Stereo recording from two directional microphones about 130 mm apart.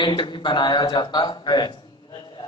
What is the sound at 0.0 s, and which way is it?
Speech, 35° left (ahead or behind).